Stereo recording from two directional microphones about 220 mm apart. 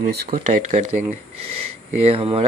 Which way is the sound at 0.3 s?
35° right (ahead or behind).